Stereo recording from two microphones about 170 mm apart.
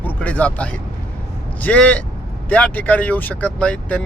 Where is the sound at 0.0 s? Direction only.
10° left (ahead or behind).